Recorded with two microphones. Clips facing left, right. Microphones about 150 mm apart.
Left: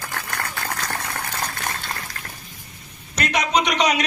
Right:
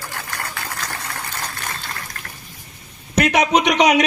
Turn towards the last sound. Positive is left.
turn(degrees=-65)  # may be behind; listen again after turning